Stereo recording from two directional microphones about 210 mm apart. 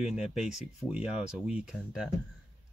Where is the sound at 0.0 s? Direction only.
5° right (ahead or behind).